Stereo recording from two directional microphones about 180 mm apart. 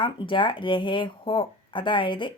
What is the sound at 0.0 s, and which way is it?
Speech, 30° left (ahead or behind).